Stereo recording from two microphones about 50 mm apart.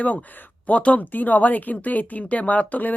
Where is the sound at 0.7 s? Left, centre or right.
Left.